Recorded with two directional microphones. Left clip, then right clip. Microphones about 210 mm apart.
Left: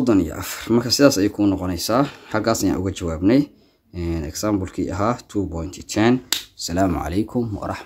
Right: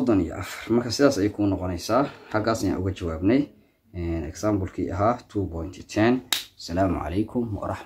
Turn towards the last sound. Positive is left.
turn(degrees=35)  # may be behind; listen again after turning